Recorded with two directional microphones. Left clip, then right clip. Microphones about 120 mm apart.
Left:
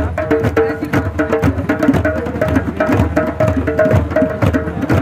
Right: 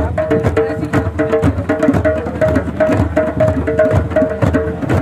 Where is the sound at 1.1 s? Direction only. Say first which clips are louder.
Right 2 dB; 25° right (ahead or behind).